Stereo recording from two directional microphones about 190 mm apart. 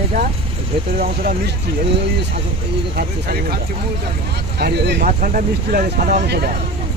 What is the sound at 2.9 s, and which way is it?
Speech, 55° right (ahead or behind).